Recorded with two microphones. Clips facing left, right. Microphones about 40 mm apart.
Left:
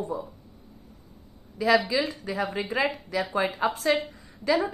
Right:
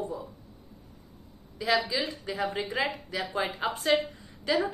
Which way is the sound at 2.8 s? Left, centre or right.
Left.